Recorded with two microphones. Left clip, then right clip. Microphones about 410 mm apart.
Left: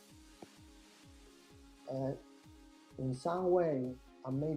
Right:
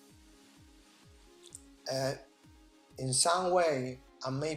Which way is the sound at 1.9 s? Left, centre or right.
Right.